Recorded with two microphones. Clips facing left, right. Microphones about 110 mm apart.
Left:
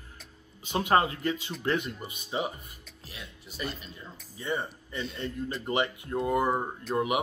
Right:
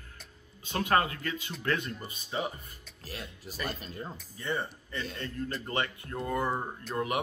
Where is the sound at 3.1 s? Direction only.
45° right (ahead or behind).